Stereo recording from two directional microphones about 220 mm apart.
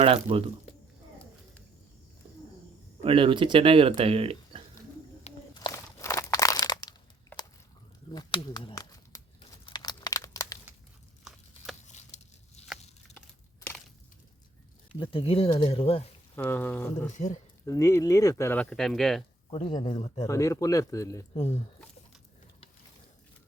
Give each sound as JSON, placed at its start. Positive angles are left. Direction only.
{"t": 0.0, "sound": "speech", "side_deg": -25}
{"t": 3.0, "sound": "speech", "side_deg": -25}
{"t": 5.5, "sound": "crumpling", "side_deg": 15}
{"t": 8.1, "sound": "a sound", "side_deg": 20}
{"t": 9.4, "sound": "crumpling", "side_deg": 20}
{"t": 11.2, "sound": "a sound", "side_deg": 0}
{"t": 11.9, "sound": "a sound", "side_deg": 30}
{"t": 14.9, "sound": "speech", "side_deg": 20}
{"t": 16.3, "sound": "speech", "side_deg": 10}
{"t": 16.9, "sound": "speech", "side_deg": 35}
{"t": 17.7, "sound": "speech", "side_deg": 15}
{"t": 19.5, "sound": "speech", "side_deg": 25}
{"t": 20.2, "sound": "speech", "side_deg": 15}
{"t": 21.3, "sound": "speech", "side_deg": 30}